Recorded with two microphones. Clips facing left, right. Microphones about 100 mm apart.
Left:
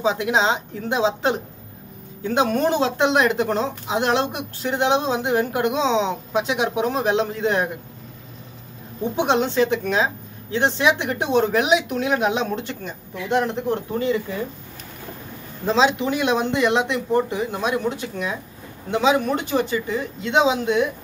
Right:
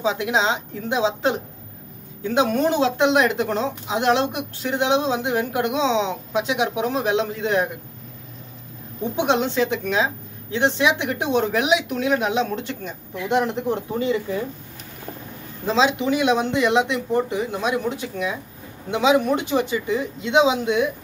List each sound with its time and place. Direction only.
0.0 s speech: 5° right (ahead or behind)
2.5 s speech: 5° right (ahead or behind)
9.6 s speech: 5° right (ahead or behind)
12.0 s speech: 5° left (ahead or behind)
12.8 s speech: 15° right (ahead or behind)
15.6 s speech: 5° right (ahead or behind)